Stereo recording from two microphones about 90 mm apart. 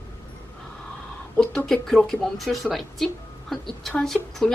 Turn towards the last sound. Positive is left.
turn(degrees=5)  # may be behind; listen again after turning